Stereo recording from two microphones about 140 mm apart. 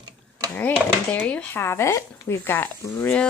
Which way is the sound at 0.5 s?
10° left (ahead or behind).